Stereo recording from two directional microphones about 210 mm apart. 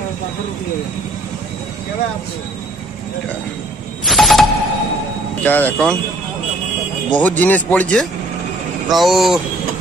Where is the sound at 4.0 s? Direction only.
Centre (ahead or behind).